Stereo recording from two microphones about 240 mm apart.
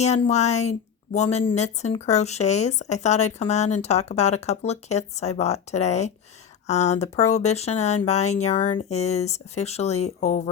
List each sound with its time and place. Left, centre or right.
0.0 s speech: left